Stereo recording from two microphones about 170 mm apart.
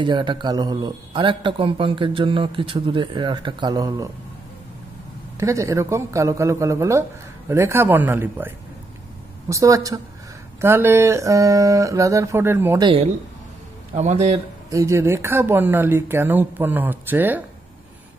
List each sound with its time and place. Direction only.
0.0 s a man's voice: 25° right (ahead or behind)
5.4 s a man's voice: 20° right (ahead or behind)
12.8 s a man's voice: 35° right (ahead or behind)
14.7 s speech: 20° right (ahead or behind)